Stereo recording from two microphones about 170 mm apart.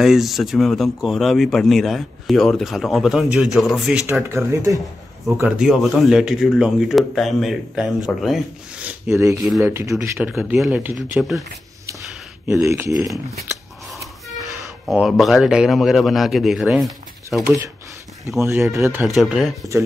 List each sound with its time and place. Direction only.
0.0 s speech: centre (ahead or behind)
4.1 s speech: 15° right (ahead or behind)
5.4 s speech: 5° right (ahead or behind)
12.4 s speech: 15° right (ahead or behind)
14.9 s speech: centre (ahead or behind)
18.7 s speech: 15° right (ahead or behind)
19.0 s speech: centre (ahead or behind)